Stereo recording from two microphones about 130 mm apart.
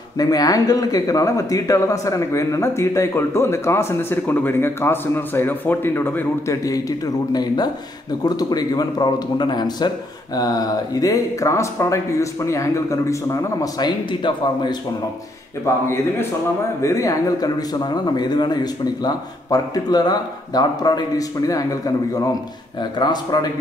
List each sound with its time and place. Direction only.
0.2 s speech: 30° left (ahead or behind)
15.6 s speech: 20° left (ahead or behind)